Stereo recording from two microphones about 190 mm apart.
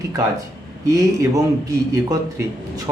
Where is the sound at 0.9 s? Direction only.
15° right (ahead or behind).